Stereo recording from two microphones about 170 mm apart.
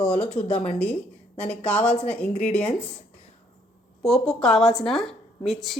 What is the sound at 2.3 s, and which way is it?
Speech, 45° left (ahead or behind).